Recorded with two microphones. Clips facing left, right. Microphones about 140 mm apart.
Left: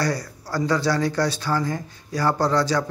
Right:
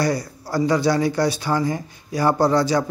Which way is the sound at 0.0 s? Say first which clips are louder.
Right 3 dB; 10° right (ahead or behind).